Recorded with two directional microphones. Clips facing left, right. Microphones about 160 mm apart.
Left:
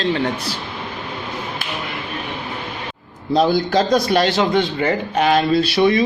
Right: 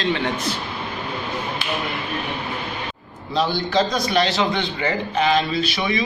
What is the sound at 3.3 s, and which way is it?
A man's voice, 45° left (ahead or behind).